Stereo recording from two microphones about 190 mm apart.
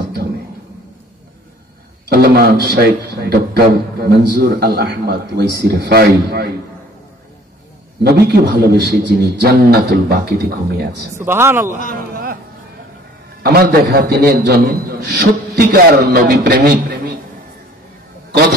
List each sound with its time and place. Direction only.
2.0 s a man's voice: 55° right (ahead or behind)
8.0 s a man's voice: 55° right (ahead or behind)
11.1 s a man's voice: 15° right (ahead or behind)
12.1 s a sound: 50° right (ahead or behind)
13.4 s a man's voice: 55° right (ahead or behind)